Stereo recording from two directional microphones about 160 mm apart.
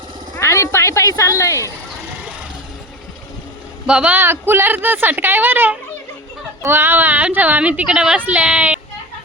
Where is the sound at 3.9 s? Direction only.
5° right (ahead or behind).